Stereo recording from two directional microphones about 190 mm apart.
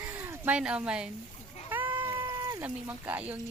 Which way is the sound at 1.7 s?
10° right (ahead or behind).